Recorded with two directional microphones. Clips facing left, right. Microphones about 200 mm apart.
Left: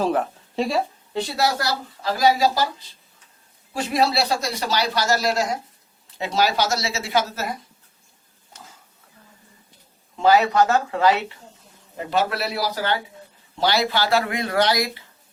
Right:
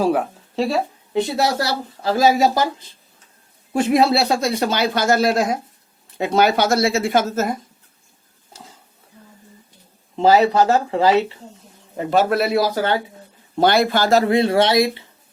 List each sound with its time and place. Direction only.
0.0 s speech: 10° right (ahead or behind)
1.1 s speech: 25° right (ahead or behind)
3.7 s a man's voice: 55° right (ahead or behind)
10.2 s speech: 30° right (ahead or behind)
12.1 s a man's voice: 50° right (ahead or behind); by 15.0 s 25° right (ahead or behind)